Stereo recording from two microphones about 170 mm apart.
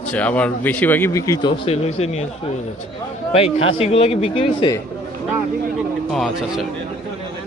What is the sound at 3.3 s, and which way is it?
Speech, 35° left (ahead or behind).